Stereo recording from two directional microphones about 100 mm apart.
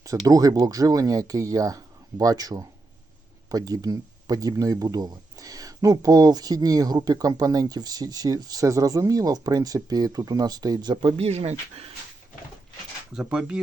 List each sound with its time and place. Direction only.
0.0 s speech: 35° right (ahead or behind)
11.2 s speech: 90° right
13.1 s speech: 10° right (ahead or behind)